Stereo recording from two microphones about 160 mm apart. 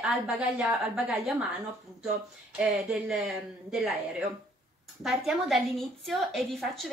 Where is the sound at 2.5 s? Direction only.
5° right (ahead or behind).